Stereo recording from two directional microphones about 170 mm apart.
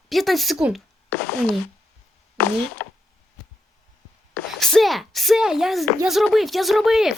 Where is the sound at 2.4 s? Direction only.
10° left (ahead or behind).